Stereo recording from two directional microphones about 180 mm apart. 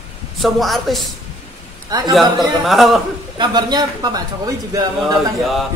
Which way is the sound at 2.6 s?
Centre (ahead or behind).